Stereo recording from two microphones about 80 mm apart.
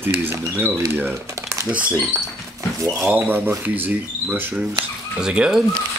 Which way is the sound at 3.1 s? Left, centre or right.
Right.